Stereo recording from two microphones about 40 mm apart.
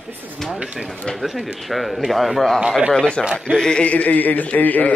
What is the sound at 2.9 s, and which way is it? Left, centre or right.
Speech, left.